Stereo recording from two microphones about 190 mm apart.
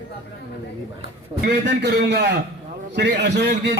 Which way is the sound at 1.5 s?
65° right (ahead or behind).